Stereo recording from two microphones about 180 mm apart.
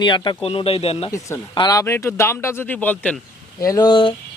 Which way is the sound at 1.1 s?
20° left (ahead or behind).